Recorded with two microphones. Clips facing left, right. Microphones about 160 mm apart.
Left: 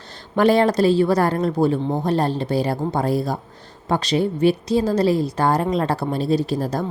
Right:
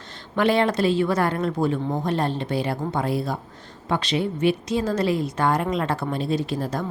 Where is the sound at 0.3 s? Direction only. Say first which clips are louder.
Left 4 dB; 40° left (ahead or behind).